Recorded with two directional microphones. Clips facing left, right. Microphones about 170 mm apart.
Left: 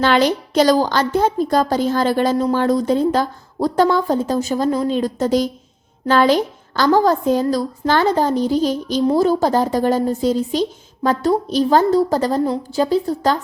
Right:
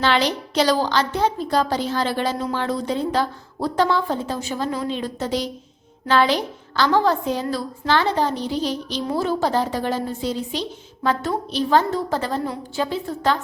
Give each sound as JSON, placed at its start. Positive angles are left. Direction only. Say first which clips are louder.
{"t": 0.0, "sound": "a woman's voice", "louder": "left 5 dB", "side_deg": 50}